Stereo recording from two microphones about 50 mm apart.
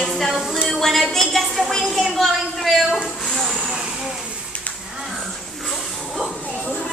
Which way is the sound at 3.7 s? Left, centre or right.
Centre.